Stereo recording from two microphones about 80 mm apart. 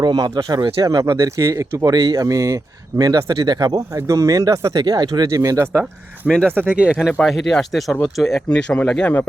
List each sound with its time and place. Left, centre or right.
0.0 s speech: right
1.9 s speech: right
2.2 s speech: right
3.9 s speech: right
5.3 s speech: right
6.2 s speech: centre
6.7 s speech: centre
7.1 s speech: centre
8.5 s speech: centre